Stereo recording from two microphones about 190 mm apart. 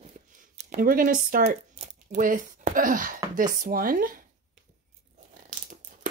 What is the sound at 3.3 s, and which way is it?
Speech, 45° right (ahead or behind).